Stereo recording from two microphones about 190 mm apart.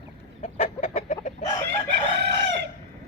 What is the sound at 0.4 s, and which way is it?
Chicken, 40° left (ahead or behind).